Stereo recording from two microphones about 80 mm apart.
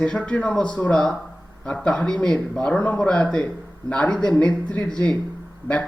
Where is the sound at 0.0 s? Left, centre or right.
Centre.